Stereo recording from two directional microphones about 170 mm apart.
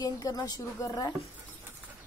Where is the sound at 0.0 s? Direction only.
20° left (ahead or behind).